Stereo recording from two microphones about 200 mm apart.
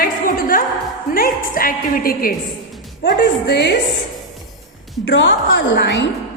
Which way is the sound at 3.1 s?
55° left (ahead or behind).